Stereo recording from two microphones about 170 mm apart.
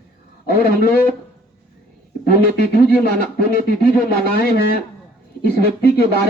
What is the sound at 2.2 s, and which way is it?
Speech, 65° left (ahead or behind).